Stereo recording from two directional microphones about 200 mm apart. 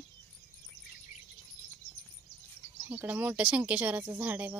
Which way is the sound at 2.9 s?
10° right (ahead or behind).